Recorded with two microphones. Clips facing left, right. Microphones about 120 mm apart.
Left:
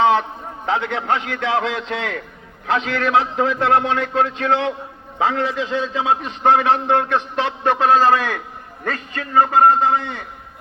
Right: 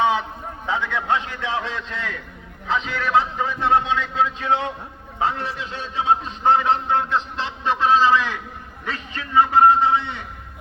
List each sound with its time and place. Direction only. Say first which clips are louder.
0.0 s a man's voice: left 4 dB; 65° left (ahead or behind)
5.2 s a man's voice: left 5 dB; 90° left; by 10.2 s 45° left (ahead or behind)